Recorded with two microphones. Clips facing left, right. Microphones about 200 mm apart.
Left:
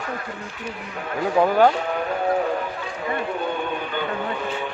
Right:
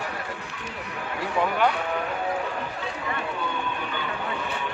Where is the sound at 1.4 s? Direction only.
35° left (ahead or behind).